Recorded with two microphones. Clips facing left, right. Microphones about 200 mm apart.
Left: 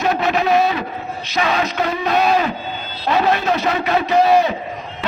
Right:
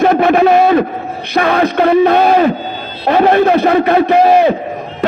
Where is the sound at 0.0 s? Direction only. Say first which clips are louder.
Right 9 dB; 55° right (ahead or behind).